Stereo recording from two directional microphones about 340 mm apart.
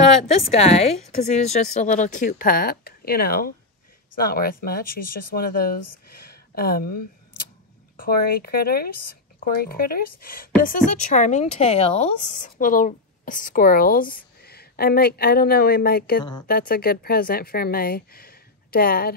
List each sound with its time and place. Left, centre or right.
0.5 s speech: centre
6.1 s a sound: left
8.0 s speech: left